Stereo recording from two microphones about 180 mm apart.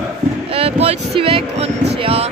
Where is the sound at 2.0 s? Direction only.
35° right (ahead or behind).